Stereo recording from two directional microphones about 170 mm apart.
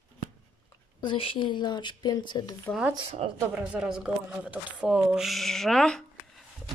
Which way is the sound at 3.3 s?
10° right (ahead or behind).